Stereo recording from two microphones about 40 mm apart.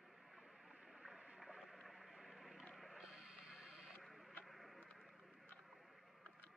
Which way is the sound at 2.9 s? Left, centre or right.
Centre.